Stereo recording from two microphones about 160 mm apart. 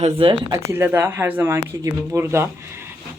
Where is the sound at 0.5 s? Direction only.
15° right (ahead or behind).